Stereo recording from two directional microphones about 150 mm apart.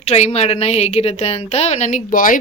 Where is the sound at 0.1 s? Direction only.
45° left (ahead or behind).